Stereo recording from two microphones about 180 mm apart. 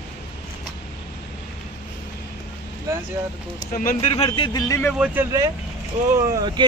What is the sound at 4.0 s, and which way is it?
Speech, 30° left (ahead or behind).